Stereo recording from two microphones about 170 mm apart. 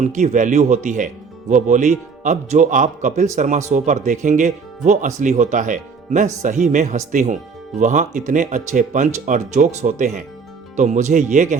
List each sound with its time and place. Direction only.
0.0 s speech: 45° right (ahead or behind)